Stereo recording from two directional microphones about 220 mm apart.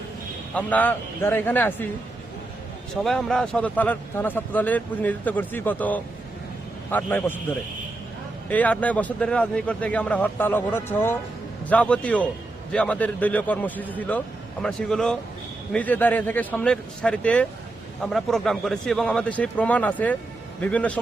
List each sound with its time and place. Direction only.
0.5 s a man's voice: 5° left (ahead or behind)
2.9 s a man's voice: centre (ahead or behind)
8.4 s a man's voice: 5° left (ahead or behind)